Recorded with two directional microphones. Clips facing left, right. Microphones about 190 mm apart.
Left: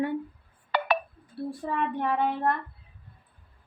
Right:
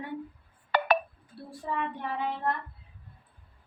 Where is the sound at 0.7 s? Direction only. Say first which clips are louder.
Right 1 dB; 45° right (ahead or behind).